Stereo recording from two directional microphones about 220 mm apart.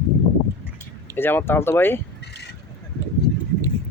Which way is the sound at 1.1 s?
10° left (ahead or behind).